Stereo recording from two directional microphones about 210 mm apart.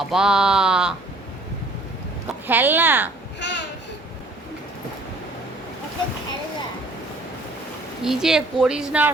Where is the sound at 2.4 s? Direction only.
10° right (ahead or behind).